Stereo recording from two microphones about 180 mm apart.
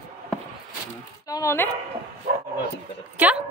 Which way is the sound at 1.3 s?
15° left (ahead or behind).